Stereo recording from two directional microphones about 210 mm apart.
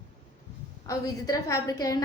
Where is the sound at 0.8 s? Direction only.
15° left (ahead or behind).